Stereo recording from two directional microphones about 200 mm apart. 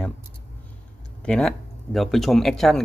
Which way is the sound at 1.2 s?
5° left (ahead or behind).